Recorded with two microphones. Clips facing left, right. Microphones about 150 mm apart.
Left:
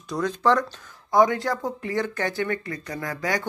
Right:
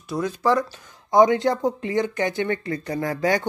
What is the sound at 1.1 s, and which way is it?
Speech, 20° right (ahead or behind).